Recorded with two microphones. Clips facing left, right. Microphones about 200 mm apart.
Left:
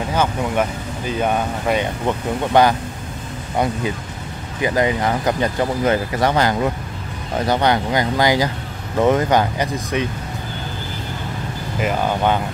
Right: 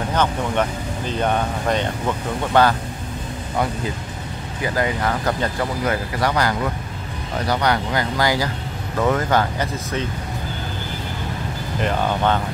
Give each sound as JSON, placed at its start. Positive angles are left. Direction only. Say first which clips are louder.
{"t": 0.1, "sound": "speech", "louder": "left 1 dB", "side_deg": 10}
{"t": 4.6, "sound": "speech", "louder": "left 4 dB", "side_deg": 20}
{"t": 11.8, "sound": "speech", "louder": "left 1 dB", "side_deg": 10}